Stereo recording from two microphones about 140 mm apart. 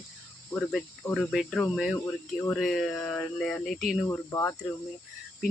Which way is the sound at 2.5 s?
5° left (ahead or behind).